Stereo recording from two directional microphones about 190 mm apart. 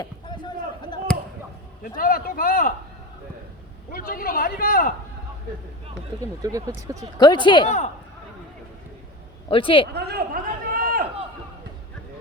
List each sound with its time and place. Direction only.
0.0 s chop: 25° left (ahead or behind)
1.8 s a man's voice: 50° left (ahead or behind)
3.9 s a man's voice: 50° left (ahead or behind)
6.4 s speech: 15° right (ahead or behind)
7.2 s speech: 25° left (ahead or behind)
9.5 s speech: 25° left (ahead or behind)
9.9 s chop: 60° right (ahead or behind)